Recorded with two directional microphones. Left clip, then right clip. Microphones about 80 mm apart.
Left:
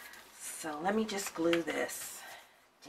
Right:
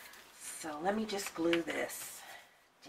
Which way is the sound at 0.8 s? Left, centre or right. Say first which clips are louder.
Left 2 dB; left.